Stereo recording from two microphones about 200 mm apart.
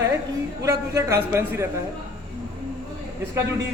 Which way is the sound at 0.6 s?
15° right (ahead or behind).